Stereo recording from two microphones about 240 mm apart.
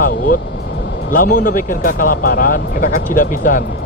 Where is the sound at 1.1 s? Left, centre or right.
Left.